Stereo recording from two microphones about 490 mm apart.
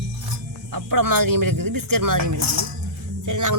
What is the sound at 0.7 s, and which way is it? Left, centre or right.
Speech, right.